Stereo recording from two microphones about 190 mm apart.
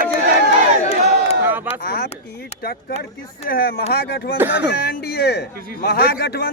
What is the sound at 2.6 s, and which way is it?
Speech, 55° left (ahead or behind).